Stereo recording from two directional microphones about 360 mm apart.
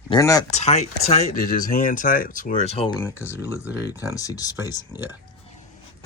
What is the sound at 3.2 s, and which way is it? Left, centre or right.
Speech, centre.